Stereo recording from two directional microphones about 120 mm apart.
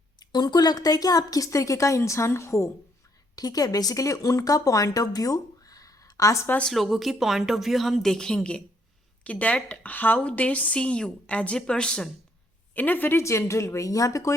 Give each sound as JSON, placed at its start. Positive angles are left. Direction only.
{"t": 0.2, "sound": "a woman's voice", "side_deg": 35}
{"t": 6.6, "sound": "a woman's voice", "side_deg": 0}